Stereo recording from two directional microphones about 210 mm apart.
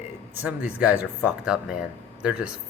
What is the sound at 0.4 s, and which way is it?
Speech, 5° right (ahead or behind).